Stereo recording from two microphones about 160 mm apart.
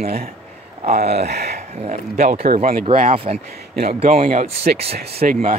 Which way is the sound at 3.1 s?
35° right (ahead or behind).